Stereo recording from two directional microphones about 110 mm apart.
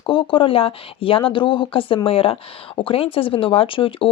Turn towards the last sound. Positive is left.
turn(degrees=50)  # may be behind; listen again after turning